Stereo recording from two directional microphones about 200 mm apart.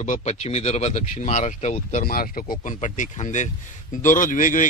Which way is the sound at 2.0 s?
45° left (ahead or behind).